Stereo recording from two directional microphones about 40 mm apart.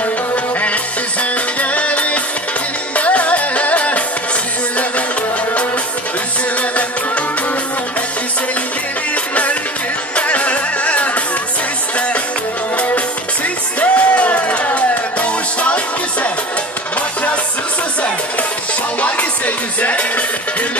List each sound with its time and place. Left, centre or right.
1.6 s music: left
9.1 s music: left
12.7 s music: left
18.9 s music: left